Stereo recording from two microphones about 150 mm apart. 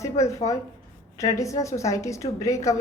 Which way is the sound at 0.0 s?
20° left (ahead or behind).